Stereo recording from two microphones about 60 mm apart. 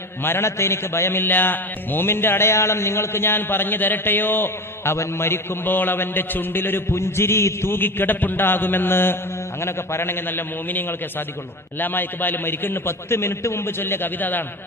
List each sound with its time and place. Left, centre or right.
0.2 s a man's voice: left
6.9 s a man's voice: left